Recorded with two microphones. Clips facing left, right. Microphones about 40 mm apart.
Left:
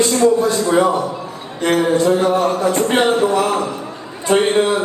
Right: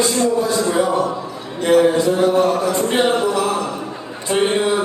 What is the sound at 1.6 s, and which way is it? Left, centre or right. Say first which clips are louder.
A man's voice: right 1 dB; left.